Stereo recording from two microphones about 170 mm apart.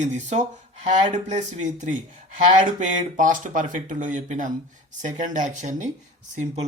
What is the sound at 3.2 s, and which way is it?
Speech, 50° right (ahead or behind).